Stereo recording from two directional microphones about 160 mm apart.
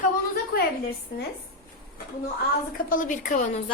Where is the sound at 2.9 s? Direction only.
55° left (ahead or behind).